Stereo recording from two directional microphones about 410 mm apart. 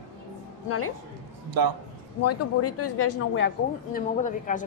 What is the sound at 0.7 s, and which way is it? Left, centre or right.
Speech, left.